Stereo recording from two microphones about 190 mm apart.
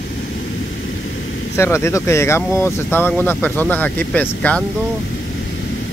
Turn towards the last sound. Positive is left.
turn(degrees=5)  # may be behind; listen again after turning